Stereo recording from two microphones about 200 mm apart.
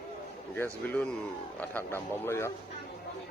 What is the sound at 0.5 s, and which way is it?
Speech, 10° left (ahead or behind).